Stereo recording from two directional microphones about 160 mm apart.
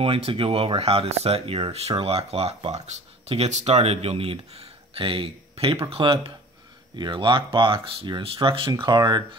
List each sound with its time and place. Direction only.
0.0 s speech: 35° right (ahead or behind)